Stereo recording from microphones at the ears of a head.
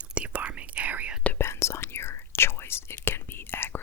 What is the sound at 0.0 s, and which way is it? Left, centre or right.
Whispering, right.